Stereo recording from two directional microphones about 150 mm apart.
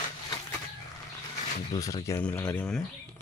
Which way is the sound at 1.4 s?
50° left (ahead or behind).